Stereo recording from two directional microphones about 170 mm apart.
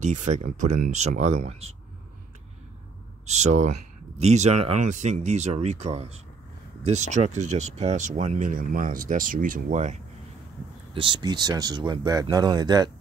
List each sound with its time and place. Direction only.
0.0 s speech: 45° right (ahead or behind)
3.3 s speech: 40° right (ahead or behind)
11.0 s speech: 30° right (ahead or behind)